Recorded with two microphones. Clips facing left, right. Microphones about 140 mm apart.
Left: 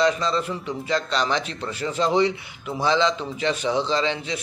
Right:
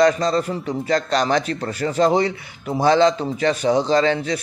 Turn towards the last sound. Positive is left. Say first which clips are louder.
# right 6 dB
turn(degrees=-45)  # may be behind; listen again after turning